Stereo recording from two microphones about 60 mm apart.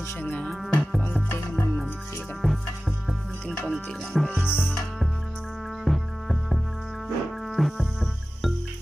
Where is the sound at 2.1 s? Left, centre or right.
Left.